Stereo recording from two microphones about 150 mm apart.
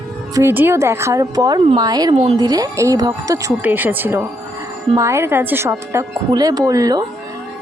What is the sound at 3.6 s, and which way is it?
Speech, 10° right (ahead or behind).